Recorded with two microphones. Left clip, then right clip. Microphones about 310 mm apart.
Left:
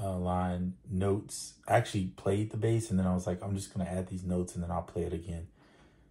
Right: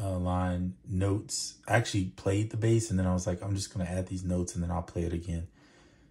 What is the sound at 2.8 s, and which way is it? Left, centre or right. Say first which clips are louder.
Speech: right 2 dB; right.